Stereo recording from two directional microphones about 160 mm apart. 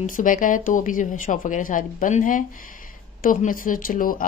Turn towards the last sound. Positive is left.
turn(degrees=60)  # may be behind; listen again after turning